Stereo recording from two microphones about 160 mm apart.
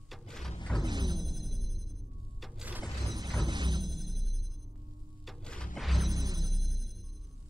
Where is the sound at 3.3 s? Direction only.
30° right (ahead or behind).